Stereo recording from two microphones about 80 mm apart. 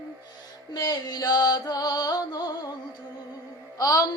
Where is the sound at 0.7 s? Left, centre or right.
Left.